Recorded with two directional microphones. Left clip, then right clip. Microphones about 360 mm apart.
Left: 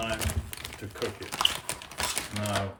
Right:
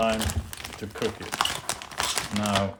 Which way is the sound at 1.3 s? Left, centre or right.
Centre.